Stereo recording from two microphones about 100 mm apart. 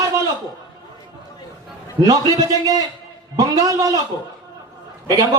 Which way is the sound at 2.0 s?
35° right (ahead or behind).